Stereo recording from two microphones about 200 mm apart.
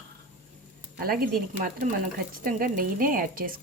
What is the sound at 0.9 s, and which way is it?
A woman's voice, 50° right (ahead or behind).